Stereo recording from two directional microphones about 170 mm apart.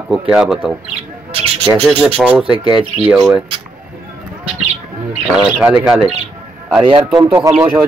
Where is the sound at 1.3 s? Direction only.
35° right (ahead or behind).